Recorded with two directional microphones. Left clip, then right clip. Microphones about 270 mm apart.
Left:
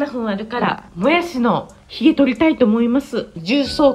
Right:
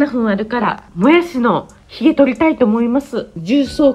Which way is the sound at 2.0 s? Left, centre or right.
Right.